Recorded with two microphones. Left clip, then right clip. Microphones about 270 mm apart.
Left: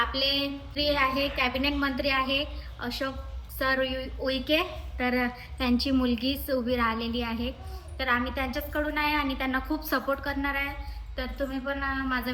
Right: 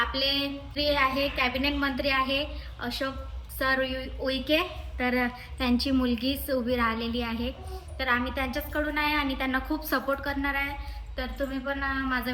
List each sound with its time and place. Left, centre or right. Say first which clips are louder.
0.0 s a woman's voice: even; centre